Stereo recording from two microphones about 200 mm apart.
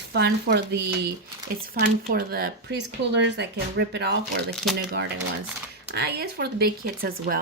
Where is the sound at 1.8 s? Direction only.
45° right (ahead or behind).